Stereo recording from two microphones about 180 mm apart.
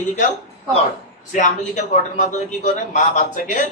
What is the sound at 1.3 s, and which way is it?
A man's voice, 40° left (ahead or behind).